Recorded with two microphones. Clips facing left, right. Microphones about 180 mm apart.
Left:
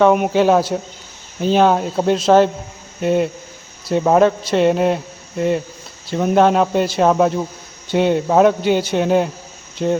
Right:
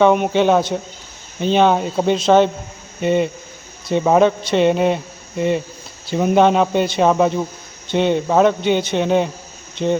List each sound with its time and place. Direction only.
0.0 s a man's voice: 5° left (ahead or behind)